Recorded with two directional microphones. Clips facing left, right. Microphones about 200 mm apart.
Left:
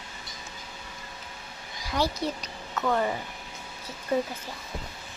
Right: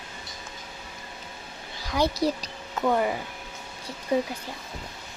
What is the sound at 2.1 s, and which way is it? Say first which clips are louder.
Speech: right 5 dB; 35° right (ahead or behind).